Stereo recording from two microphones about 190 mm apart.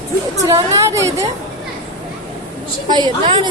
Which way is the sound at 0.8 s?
15° right (ahead or behind).